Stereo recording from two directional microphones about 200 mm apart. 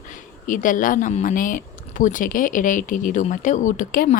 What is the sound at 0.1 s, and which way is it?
Speech, 40° left (ahead or behind).